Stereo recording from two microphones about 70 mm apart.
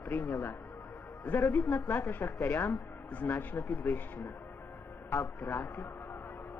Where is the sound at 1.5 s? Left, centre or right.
Left.